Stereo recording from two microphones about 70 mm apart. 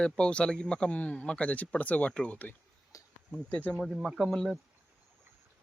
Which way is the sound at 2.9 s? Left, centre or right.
Left.